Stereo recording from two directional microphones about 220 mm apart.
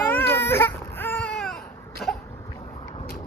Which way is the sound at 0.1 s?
10° left (ahead or behind).